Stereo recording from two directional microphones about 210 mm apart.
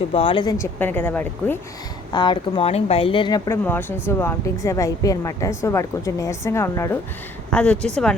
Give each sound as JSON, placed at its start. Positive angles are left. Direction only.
{"t": 0.1, "sound": "speech", "side_deg": 25}
{"t": 0.6, "sound": "speech", "side_deg": 10}
{"t": 2.1, "sound": "speech", "side_deg": 20}